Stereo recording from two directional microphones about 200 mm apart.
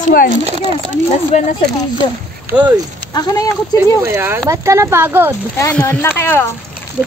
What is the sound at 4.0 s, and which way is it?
Speech, 10° right (ahead or behind).